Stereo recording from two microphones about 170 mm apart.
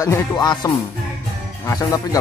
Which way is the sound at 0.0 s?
20° left (ahead or behind).